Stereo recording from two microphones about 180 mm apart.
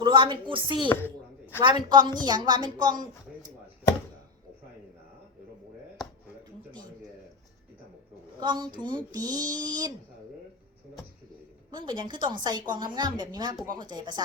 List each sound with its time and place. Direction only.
0.0 s a woman's voice: 25° right (ahead or behind)
8.4 s a woman's voice: 25° right (ahead or behind)
11.7 s a woman's voice: 25° right (ahead or behind)